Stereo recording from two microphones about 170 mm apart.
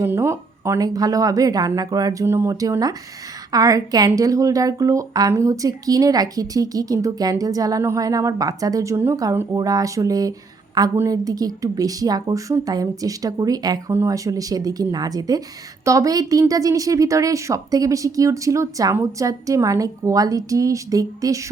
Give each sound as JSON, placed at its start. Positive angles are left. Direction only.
{"t": 0.0, "sound": "a woman's voice", "side_deg": -15}